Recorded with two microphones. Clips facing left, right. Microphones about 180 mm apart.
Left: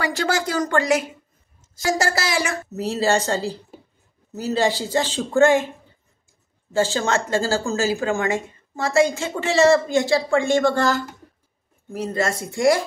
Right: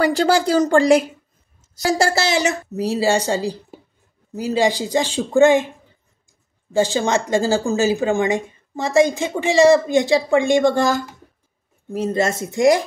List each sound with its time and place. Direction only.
0.3 s a woman's voice: 30° right (ahead or behind)
6.7 s a woman's voice: 15° right (ahead or behind)